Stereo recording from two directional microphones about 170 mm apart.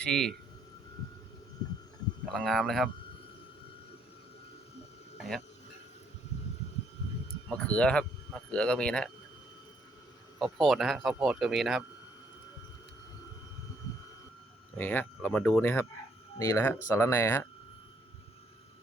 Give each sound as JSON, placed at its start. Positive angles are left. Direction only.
{"t": 0.0, "sound": "speech", "side_deg": 5}
{"t": 2.3, "sound": "speech", "side_deg": 0}
{"t": 5.1, "sound": "a sound", "side_deg": 0}
{"t": 7.5, "sound": "speech", "side_deg": 5}
{"t": 10.4, "sound": "speech", "side_deg": 0}
{"t": 14.8, "sound": "speech", "side_deg": 10}